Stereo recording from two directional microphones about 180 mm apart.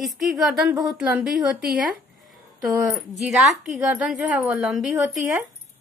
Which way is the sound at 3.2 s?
Centre (ahead or behind).